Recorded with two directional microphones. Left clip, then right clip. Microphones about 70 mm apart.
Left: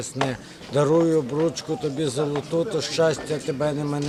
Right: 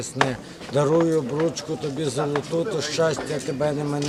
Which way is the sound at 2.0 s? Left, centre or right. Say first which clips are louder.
Right 3 dB; centre.